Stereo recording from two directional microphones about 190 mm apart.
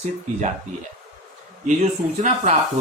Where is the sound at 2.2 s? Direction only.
40° right (ahead or behind).